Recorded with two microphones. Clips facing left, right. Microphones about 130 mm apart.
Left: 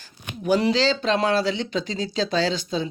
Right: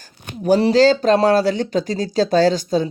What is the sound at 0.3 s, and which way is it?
Speech, 40° right (ahead or behind).